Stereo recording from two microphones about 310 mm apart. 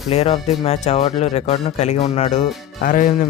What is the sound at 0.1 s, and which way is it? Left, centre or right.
Speech, centre.